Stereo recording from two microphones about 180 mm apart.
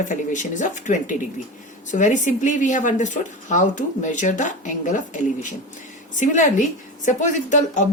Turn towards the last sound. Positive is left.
turn(degrees=45)  # may be behind; listen again after turning